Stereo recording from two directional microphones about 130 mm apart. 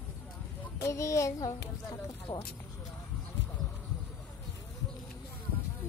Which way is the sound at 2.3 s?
40° left (ahead or behind).